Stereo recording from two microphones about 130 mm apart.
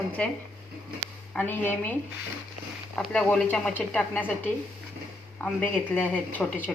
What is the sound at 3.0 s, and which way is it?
Speech, 5° left (ahead or behind).